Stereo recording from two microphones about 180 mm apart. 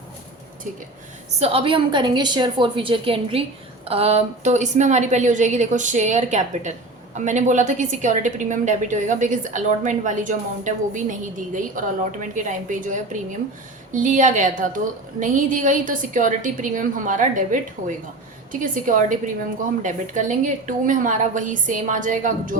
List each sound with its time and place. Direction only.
1.4 s a woman's voice: 30° right (ahead or behind); by 22.5 s 45° right (ahead or behind)